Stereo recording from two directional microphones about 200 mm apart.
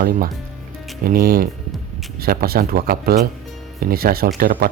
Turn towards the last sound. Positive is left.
turn(degrees=-50)  # may be behind; listen again after turning